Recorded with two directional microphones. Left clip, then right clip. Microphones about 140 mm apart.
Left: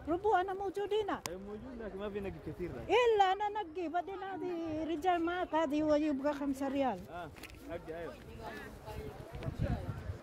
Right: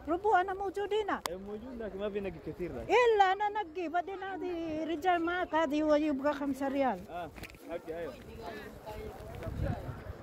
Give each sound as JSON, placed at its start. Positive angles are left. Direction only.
{"t": 0.1, "sound": "speech", "side_deg": 20}
{"t": 1.8, "sound": "speech", "side_deg": 60}
{"t": 2.9, "sound": "speech", "side_deg": 20}
{"t": 6.3, "sound": "speech", "side_deg": 25}